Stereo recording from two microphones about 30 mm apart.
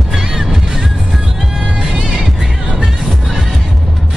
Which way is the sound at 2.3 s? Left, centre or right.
Centre.